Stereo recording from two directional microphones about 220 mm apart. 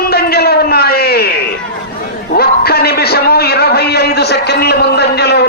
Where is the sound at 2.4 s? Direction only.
45° left (ahead or behind).